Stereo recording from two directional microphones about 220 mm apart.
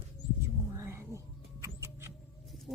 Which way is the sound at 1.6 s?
10° right (ahead or behind).